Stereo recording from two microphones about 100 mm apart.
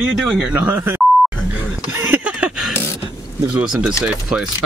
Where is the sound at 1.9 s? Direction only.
20° right (ahead or behind).